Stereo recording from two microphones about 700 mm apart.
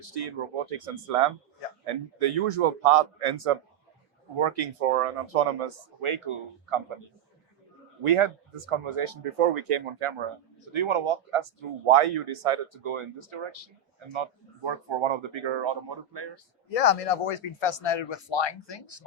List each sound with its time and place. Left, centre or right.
0.3 s speech: right
8.0 s speech: right
16.6 s speech: left